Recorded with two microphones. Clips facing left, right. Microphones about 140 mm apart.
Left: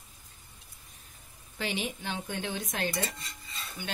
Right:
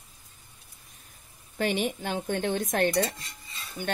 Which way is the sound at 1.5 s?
50° right (ahead or behind).